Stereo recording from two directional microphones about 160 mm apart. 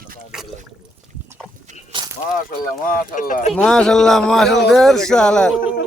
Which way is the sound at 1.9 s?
30° right (ahead or behind).